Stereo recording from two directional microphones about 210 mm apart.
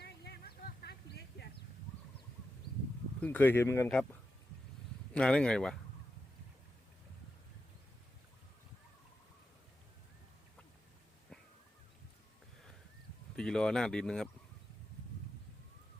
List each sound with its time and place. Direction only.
0.0 s a sound: 50° left (ahead or behind)
3.2 s speech: 10° left (ahead or behind)
5.1 s speech: 5° left (ahead or behind)
13.3 s speech: 5° left (ahead or behind)